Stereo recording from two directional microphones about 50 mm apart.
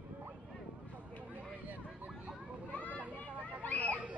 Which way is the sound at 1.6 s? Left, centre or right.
Right.